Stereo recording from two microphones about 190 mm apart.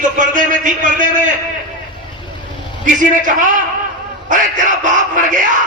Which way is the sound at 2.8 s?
45° right (ahead or behind).